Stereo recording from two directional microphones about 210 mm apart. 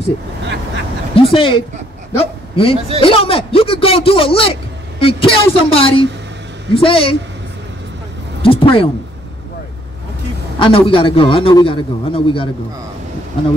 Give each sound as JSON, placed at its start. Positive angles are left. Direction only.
{"t": 1.1, "sound": "a man's voice", "side_deg": 25}
{"t": 8.4, "sound": "a sound", "side_deg": 25}
{"t": 10.6, "sound": "a man's voice", "side_deg": 25}